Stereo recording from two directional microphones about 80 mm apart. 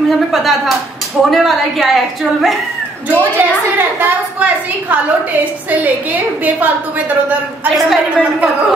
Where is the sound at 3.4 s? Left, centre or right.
Right.